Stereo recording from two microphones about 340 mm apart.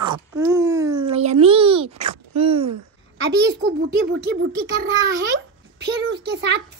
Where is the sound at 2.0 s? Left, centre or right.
Right.